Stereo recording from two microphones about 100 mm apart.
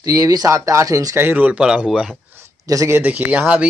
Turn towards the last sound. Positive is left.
turn(degrees=-15)  # may be behind; listen again after turning